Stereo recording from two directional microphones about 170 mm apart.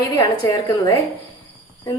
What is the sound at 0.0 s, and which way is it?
A woman's voice, 20° left (ahead or behind).